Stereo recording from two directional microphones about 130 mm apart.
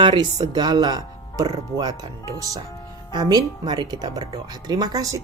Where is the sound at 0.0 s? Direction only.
40° right (ahead or behind).